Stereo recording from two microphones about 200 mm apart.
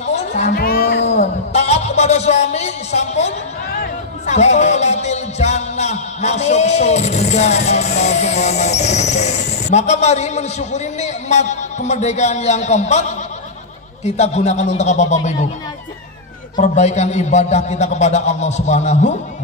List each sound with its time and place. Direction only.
0.0 s music: 35° left (ahead or behind)
0.5 s music: 50° left (ahead or behind)
1.0 s music: 35° left (ahead or behind)
4.3 s speech: 35° left (ahead or behind)
14.0 s a man's voice: 35° left (ahead or behind)
16.5 s a man's voice: 35° left (ahead or behind)